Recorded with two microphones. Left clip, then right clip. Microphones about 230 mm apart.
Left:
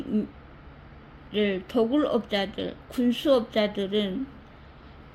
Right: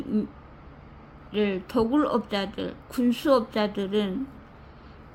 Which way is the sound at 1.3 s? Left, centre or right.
Centre.